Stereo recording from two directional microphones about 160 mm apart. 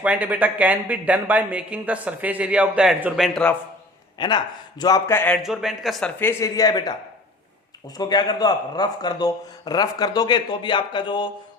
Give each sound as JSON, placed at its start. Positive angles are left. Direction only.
{"t": 0.0, "sound": "speech", "side_deg": -10}
{"t": 4.2, "sound": "speech", "side_deg": 30}
{"t": 5.4, "sound": "a man's voice", "side_deg": 0}
{"t": 6.1, "sound": "speech", "side_deg": 15}